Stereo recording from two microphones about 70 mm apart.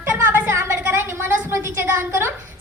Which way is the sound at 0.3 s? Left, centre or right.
Right.